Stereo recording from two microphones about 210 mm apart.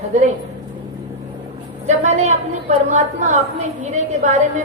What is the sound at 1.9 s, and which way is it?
A woman's voice, 30° right (ahead or behind).